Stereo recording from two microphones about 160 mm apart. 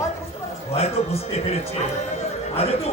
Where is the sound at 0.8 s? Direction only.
40° left (ahead or behind).